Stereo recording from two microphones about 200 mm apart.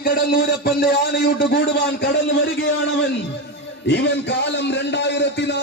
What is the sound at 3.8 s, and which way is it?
A man's voice, 60° left (ahead or behind).